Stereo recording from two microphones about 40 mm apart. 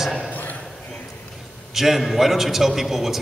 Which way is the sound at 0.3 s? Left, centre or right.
Left.